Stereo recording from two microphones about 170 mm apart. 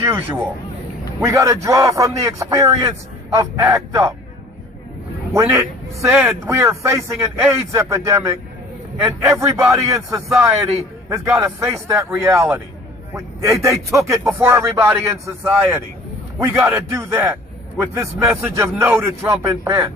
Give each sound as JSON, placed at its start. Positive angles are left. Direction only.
{"t": 0.0, "sound": "a man's voice", "side_deg": -15}
{"t": 5.3, "sound": "a man's voice", "side_deg": -15}
{"t": 6.1, "sound": "speech", "side_deg": -5}
{"t": 6.4, "sound": "a man's voice", "side_deg": -15}